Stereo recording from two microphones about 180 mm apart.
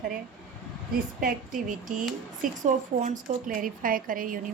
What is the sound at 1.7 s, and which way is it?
A woman's voice, 45° right (ahead or behind).